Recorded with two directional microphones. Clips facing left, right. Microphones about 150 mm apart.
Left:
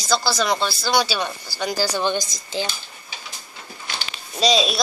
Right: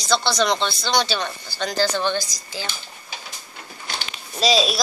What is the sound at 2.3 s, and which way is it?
Speech, 25° left (ahead or behind).